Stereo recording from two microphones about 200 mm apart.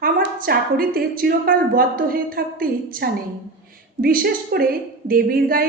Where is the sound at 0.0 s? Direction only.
50° right (ahead or behind).